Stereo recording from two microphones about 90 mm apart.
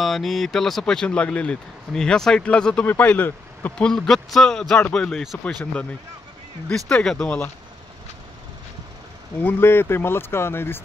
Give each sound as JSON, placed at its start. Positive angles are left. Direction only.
{"t": 0.0, "sound": "speech", "side_deg": 0}
{"t": 3.7, "sound": "speech", "side_deg": 5}
{"t": 6.7, "sound": "speech", "side_deg": 10}
{"t": 9.4, "sound": "speech", "side_deg": 25}